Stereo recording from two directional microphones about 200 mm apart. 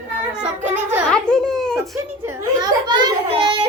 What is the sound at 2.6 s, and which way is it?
A child's voice, 20° right (ahead or behind).